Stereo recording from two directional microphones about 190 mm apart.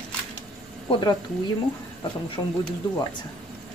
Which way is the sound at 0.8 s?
25° left (ahead or behind).